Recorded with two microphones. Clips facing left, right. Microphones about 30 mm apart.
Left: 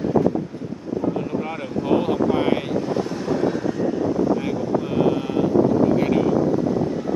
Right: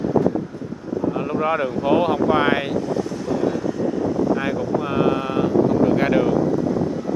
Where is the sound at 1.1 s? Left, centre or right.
Right.